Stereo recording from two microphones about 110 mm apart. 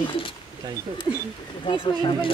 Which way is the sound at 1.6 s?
50° left (ahead or behind).